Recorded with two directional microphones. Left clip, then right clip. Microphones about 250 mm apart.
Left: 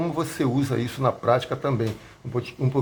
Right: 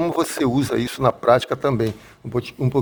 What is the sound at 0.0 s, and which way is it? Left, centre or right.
Speech, right.